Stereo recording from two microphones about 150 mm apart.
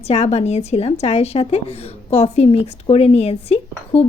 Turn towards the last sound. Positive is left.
turn(degrees=45)  # may be behind; listen again after turning